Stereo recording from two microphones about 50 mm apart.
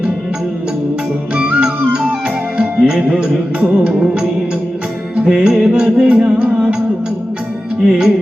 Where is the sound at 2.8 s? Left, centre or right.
Centre.